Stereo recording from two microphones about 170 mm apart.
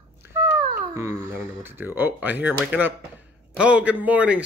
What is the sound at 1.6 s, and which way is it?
Speech, 15° right (ahead or behind).